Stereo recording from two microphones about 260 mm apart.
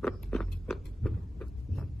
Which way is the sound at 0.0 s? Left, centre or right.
Centre.